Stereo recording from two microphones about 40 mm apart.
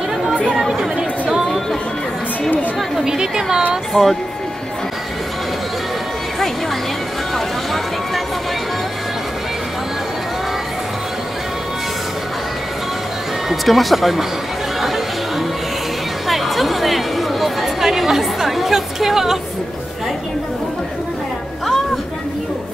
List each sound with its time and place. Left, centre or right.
0.6 s chatter: centre
3.1 s a woman's voice: centre
3.9 s speech: centre
7.3 s a sound: centre
13.5 s speech: centre
16.3 s a sound: centre